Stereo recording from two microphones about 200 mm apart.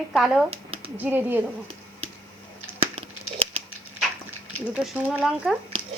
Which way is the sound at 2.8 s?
30° right (ahead or behind).